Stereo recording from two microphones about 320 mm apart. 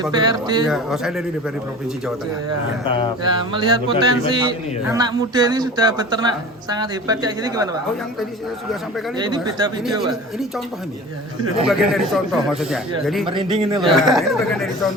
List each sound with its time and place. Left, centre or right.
0.0 s a man's voice: centre
0.7 s speech: centre
3.2 s a man's voice: centre
9.1 s a man's voice: centre
11.7 s speech: centre
13.2 s a man's voice: centre
13.7 s speech: centre